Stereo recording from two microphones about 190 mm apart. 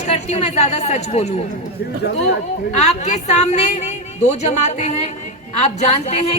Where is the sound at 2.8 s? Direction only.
35° left (ahead or behind).